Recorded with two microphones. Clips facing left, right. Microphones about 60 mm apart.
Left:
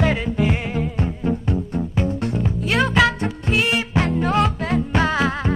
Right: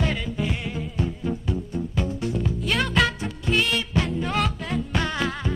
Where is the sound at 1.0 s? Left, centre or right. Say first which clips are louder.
Left 5 dB; left.